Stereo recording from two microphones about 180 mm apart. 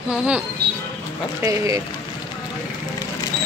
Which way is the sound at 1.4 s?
15° right (ahead or behind).